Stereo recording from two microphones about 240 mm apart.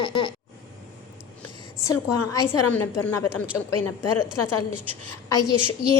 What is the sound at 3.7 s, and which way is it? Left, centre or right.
Speech, left.